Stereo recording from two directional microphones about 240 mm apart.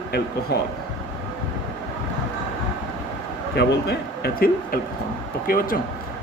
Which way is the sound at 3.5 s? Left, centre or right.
Left.